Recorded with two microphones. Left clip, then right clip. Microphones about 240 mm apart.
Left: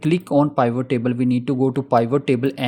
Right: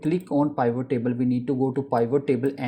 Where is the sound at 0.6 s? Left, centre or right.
Left.